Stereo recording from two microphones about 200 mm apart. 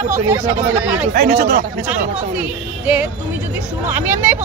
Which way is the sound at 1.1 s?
50° right (ahead or behind).